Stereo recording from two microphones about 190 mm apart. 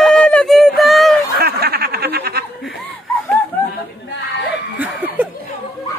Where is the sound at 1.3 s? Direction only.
55° right (ahead or behind).